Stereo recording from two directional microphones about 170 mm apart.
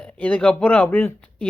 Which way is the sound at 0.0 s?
10° left (ahead or behind).